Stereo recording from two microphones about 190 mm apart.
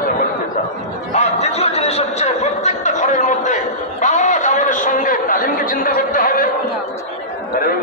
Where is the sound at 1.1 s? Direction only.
35° left (ahead or behind).